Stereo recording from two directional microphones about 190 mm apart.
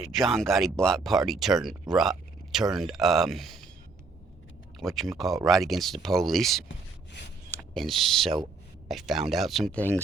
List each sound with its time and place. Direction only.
0.0 s speech: centre (ahead or behind)
4.8 s speech: centre (ahead or behind)
6.7 s a sound: 70° left (ahead or behind)
7.5 s speech: centre (ahead or behind)